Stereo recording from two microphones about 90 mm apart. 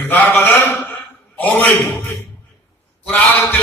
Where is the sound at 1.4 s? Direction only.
20° left (ahead or behind).